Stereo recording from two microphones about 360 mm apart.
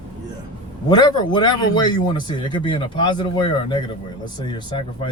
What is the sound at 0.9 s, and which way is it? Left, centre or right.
A man's voice, centre.